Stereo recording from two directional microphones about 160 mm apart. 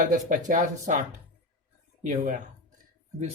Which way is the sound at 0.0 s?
55° right (ahead or behind).